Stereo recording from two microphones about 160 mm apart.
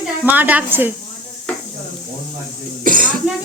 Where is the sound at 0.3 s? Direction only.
10° right (ahead or behind).